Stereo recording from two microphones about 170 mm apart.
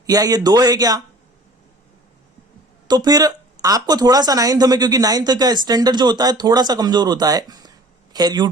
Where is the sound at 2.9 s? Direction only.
25° right (ahead or behind).